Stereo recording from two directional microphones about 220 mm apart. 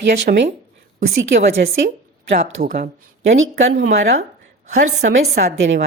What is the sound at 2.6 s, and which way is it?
Speech, 35° right (ahead or behind).